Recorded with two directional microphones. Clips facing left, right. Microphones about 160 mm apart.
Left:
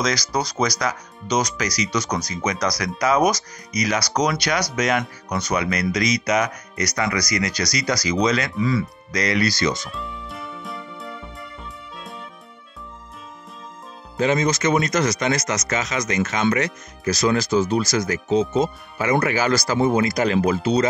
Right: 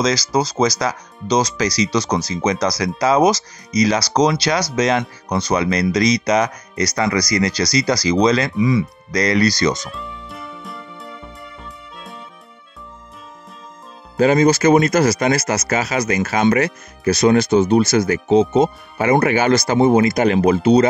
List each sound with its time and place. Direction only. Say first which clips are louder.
0.0 s speech: right 5 dB; 25° right (ahead or behind)
8.5 s speech: right 5 dB; 20° right (ahead or behind)
9.1 s speech: right 5 dB; 40° right (ahead or behind)
9.8 s music: right 1 dB; centre (ahead or behind)
14.2 s speech: right 7 dB; 30° right (ahead or behind)
20.2 s speech: right 5 dB; 55° right (ahead or behind)